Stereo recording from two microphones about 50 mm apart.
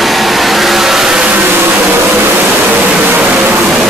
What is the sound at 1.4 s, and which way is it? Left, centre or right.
Vehicle, right.